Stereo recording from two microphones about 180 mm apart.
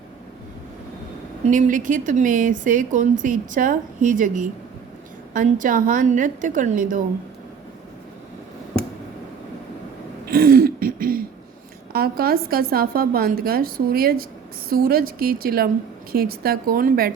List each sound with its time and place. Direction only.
1.5 s speech: 45° right (ahead or behind)
10.2 s throat clearing: 55° right (ahead or behind)
11.9 s a woman's voice: 60° right (ahead or behind)